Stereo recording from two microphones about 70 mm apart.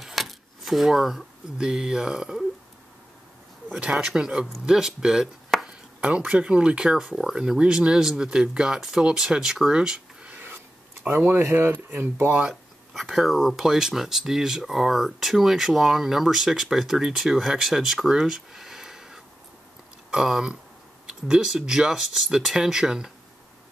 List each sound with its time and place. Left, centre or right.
0.0 s speech: centre
3.9 s speech: centre
5.5 s chopping: centre
5.9 s speech: centre
10.3 s a sound: right
11.5 s speech: right
12.3 s speech: centre